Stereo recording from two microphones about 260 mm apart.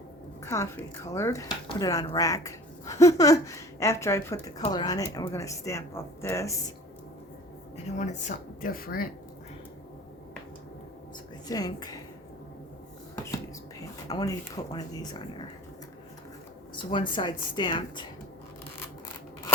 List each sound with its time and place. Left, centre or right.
0.4 s speech: centre
7.9 s speech: left
11.4 s speech: centre
14.1 s speech: centre
16.7 s speech: centre